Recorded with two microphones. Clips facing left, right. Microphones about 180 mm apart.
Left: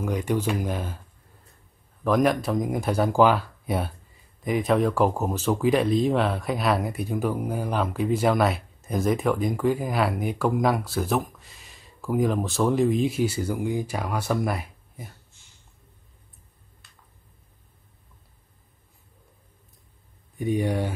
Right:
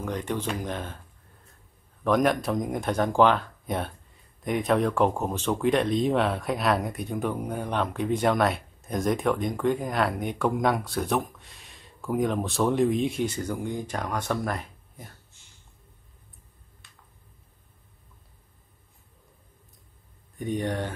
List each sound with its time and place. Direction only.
0.0 s speech: 10° left (ahead or behind)
2.0 s speech: centre (ahead or behind)
16.8 s a sound: centre (ahead or behind)
20.3 s speech: 10° left (ahead or behind)